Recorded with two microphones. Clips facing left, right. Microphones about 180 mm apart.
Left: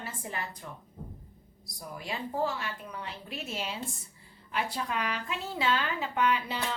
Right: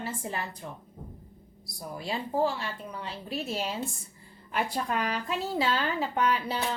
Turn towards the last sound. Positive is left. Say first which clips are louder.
# right 1 dB
turn(degrees=-40)  # may be behind; listen again after turning